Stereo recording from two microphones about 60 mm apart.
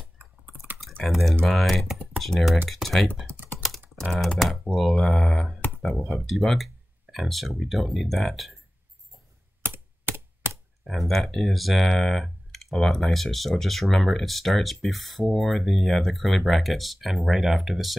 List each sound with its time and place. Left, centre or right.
1.0 s speech: centre
3.5 s computer keyboard: centre
4.0 s speech: centre
9.7 s computer keyboard: right
10.8 s speech: centre